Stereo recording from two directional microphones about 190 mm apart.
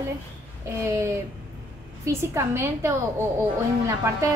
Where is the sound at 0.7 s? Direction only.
15° right (ahead or behind).